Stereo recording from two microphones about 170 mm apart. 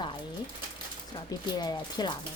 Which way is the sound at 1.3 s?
25° left (ahead or behind).